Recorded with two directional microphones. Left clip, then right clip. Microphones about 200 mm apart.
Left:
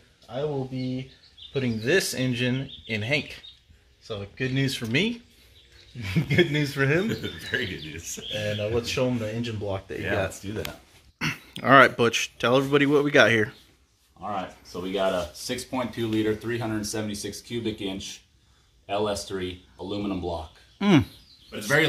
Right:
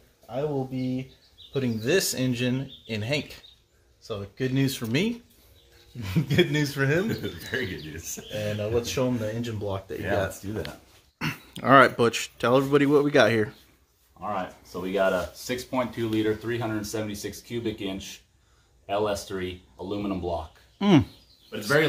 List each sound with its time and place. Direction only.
0.3 s speech: centre (ahead or behind)
4.1 s speech: 5° right (ahead or behind)
6.2 s speech: 10° left (ahead or behind)
7.1 s speech: 25° right (ahead or behind)
8.5 s speech: 5° left (ahead or behind)
11.1 s speech: centre (ahead or behind)